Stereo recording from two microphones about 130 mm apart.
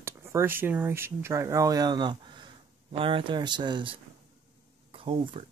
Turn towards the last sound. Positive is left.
turn(degrees=-45)  # may be behind; listen again after turning